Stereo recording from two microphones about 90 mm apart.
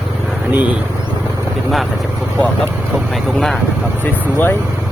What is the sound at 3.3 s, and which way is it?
Speech, 5° left (ahead or behind).